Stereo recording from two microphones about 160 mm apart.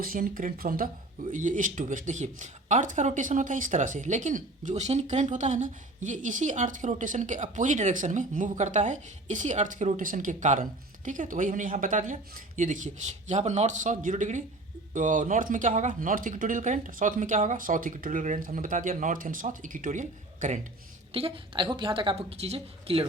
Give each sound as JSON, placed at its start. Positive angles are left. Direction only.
{"t": 0.0, "sound": "speech", "side_deg": -60}
{"t": 1.3, "sound": "speech", "side_deg": -50}
{"t": 21.1, "sound": "a woman's voice", "side_deg": -35}